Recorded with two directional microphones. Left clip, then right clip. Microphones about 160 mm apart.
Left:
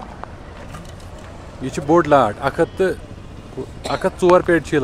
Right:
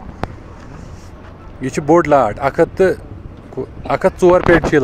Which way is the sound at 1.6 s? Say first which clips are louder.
Right 3 dB; 20° right (ahead or behind).